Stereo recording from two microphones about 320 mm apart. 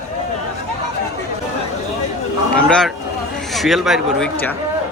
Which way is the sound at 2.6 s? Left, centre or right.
Centre.